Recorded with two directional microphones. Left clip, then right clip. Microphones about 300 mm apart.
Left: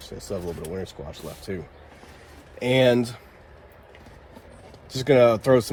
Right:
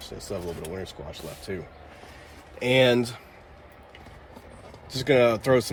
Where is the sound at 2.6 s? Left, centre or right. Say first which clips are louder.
Left 1 dB; centre.